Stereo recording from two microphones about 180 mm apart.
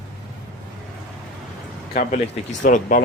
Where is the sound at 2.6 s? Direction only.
45° left (ahead or behind).